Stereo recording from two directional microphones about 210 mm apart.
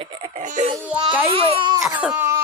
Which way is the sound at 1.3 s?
25° right (ahead or behind).